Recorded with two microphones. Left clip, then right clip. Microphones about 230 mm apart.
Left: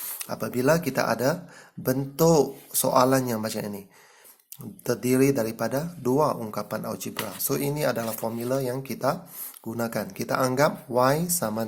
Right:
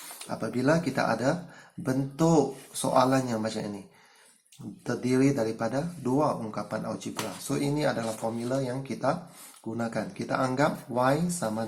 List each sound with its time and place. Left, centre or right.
0.0 s speech: left
4.8 s speech: left